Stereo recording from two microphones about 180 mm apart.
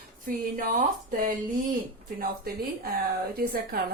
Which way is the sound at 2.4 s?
55° right (ahead or behind).